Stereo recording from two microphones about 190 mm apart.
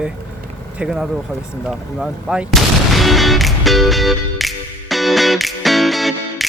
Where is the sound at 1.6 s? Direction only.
5° right (ahead or behind).